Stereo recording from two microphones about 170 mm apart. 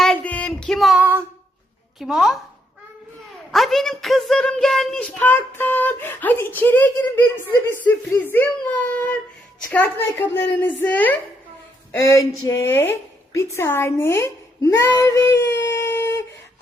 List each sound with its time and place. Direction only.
0.0 s child singing: 5° left (ahead or behind); by 1.2 s 10° right (ahead or behind)
2.0 s a woman's voice: centre (ahead or behind)
3.5 s a woman's voice: centre (ahead or behind)